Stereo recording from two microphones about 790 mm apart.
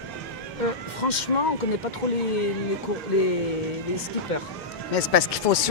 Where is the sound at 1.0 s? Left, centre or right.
Left.